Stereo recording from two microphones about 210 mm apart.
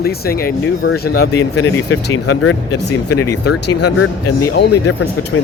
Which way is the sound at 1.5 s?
75° left (ahead or behind).